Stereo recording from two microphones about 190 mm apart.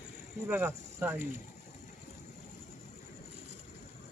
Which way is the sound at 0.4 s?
10° right (ahead or behind).